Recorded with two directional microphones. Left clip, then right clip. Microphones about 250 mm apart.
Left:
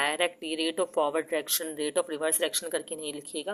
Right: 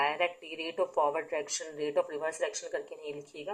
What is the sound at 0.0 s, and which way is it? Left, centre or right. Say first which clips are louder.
Speech: left 2 dB; left.